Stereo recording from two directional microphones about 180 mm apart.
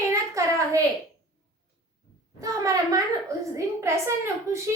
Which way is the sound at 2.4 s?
20° right (ahead or behind).